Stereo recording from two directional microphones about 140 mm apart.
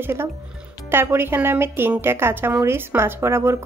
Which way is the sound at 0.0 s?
15° right (ahead or behind).